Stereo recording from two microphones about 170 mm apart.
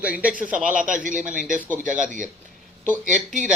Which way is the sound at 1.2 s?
5° right (ahead or behind).